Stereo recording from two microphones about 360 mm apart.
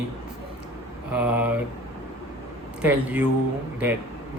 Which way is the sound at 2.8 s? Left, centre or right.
Centre.